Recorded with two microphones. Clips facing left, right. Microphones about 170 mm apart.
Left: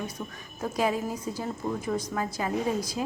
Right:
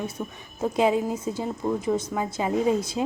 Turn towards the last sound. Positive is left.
turn(degrees=-25)  # may be behind; listen again after turning